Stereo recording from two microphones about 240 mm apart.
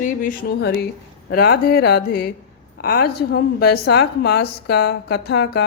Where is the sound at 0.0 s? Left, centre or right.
Left.